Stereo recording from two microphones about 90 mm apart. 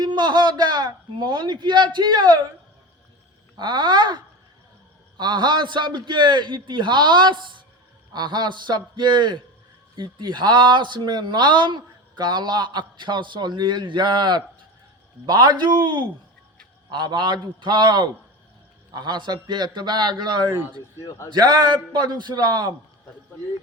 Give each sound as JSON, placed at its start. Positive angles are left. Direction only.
{"t": 0.0, "sound": "a man's voice", "side_deg": -55}
{"t": 3.6, "sound": "speech", "side_deg": -60}
{"t": 21.0, "sound": "a man's voice", "side_deg": 35}
{"t": 21.9, "sound": "a man's voice", "side_deg": -50}